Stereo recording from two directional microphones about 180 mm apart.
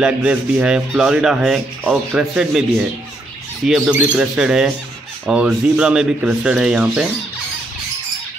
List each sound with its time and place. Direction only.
0.0 s speech: 10° right (ahead or behind)
3.6 s speech: 5° right (ahead or behind)